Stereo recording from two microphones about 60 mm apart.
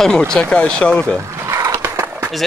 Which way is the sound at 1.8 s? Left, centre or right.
Right.